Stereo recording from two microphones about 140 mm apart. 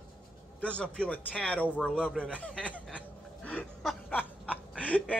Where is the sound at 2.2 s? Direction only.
10° left (ahead or behind).